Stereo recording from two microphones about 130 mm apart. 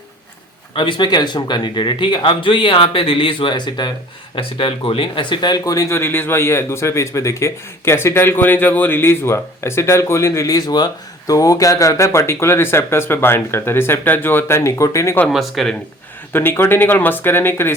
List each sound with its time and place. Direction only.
0.7 s speech: 40° left (ahead or behind); by 15.2 s 20° left (ahead or behind)
15.3 s speech: centre (ahead or behind)
16.3 s speech: 15° left (ahead or behind)